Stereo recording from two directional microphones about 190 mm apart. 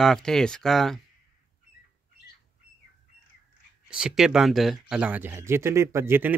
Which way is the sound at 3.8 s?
5° right (ahead or behind).